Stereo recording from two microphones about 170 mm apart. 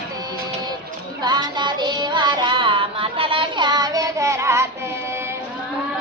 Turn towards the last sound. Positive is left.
turn(degrees=-15)  # may be behind; listen again after turning